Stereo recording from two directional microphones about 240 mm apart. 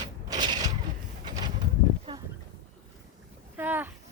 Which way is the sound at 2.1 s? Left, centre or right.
Centre.